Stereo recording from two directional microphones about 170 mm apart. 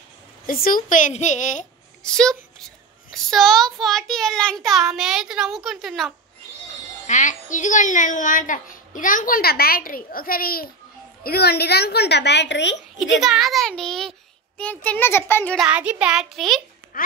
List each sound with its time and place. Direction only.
0.5 s a child's voice: 55° left (ahead or behind)
2.0 s a child's voice: 5° left (ahead or behind)
7.1 s a child's voice: 50° left (ahead or behind); by 12.7 s 90° left
13.1 s a child's voice: centre (ahead or behind)
15.5 s a child's voice: 5° right (ahead or behind)
16.9 s a woman's voice: 60° left (ahead or behind)